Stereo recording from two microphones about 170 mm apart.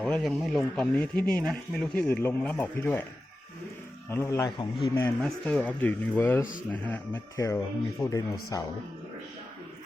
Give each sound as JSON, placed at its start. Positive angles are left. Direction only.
{"t": 0.0, "sound": "speech", "side_deg": 0}
{"t": 4.1, "sound": "speech", "side_deg": 15}
{"t": 5.2, "sound": "speech", "side_deg": 10}